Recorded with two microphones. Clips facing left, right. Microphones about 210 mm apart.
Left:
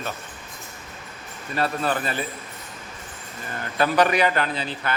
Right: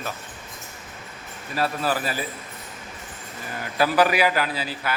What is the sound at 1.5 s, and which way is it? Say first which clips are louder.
Speech: even; 5° right (ahead or behind).